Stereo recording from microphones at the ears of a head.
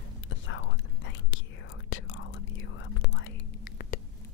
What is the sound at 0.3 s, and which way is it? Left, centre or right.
Whispering, left.